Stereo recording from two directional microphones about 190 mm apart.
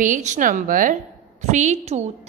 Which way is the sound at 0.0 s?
40° right (ahead or behind).